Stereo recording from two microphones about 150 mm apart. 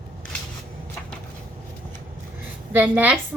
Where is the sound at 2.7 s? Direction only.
10° right (ahead or behind).